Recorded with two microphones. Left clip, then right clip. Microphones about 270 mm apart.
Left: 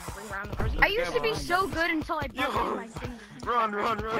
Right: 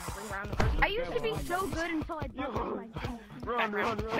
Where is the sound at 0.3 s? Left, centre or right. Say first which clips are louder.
Right 1 dB; centre; by 3.6 s left.